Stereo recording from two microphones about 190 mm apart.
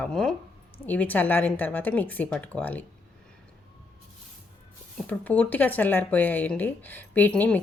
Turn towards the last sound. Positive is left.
turn(degrees=10)  # may be behind; listen again after turning